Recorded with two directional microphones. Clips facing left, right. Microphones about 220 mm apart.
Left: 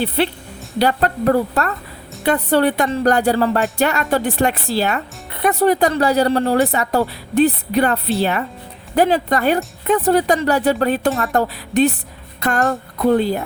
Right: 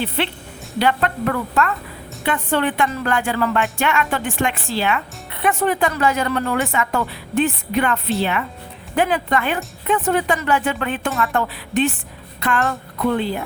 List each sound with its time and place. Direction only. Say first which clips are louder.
0.2 s speech: left 4 dB; 40° left (ahead or behind)